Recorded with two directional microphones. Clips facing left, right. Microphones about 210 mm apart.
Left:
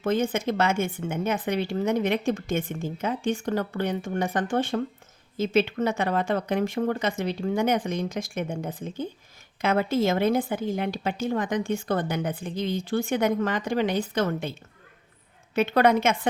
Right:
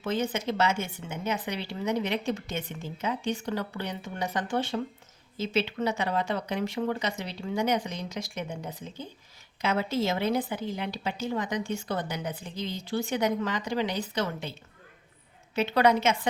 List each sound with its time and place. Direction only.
0.0 s speech: 50° left (ahead or behind)
15.5 s speech: 50° left (ahead or behind)